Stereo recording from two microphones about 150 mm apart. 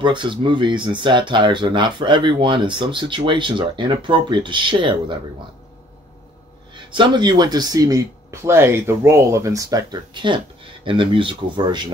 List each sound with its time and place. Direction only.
0.0 s speech: 30° right (ahead or behind)
6.7 s speech: 30° right (ahead or behind)